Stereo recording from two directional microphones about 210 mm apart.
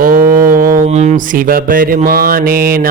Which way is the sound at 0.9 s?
30° right (ahead or behind).